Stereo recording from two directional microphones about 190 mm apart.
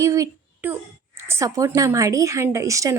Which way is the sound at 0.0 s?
15° right (ahead or behind).